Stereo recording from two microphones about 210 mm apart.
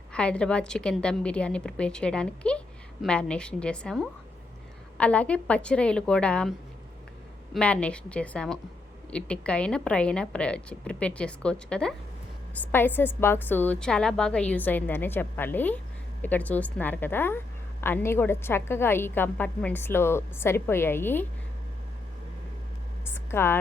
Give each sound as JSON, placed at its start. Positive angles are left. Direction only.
{"t": 0.1, "sound": "a woman's voice", "side_deg": 5}
{"t": 7.5, "sound": "a woman's voice", "side_deg": 5}
{"t": 23.1, "sound": "a sound", "side_deg": 10}